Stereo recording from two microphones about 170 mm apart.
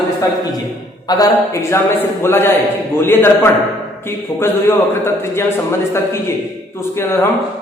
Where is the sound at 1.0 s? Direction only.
20° left (ahead or behind).